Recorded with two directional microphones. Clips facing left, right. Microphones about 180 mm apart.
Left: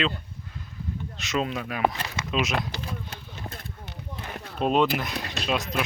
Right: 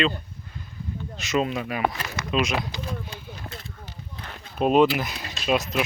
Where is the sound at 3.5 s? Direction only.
60° left (ahead or behind).